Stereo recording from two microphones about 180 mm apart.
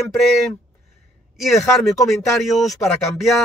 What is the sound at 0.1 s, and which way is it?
Speech, centre (ahead or behind).